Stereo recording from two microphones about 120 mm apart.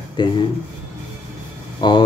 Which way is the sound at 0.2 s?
40° left (ahead or behind).